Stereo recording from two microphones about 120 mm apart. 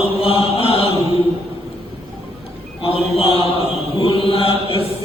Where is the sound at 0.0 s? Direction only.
50° left (ahead or behind).